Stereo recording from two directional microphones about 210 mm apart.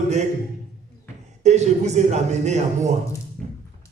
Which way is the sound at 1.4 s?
35° right (ahead or behind).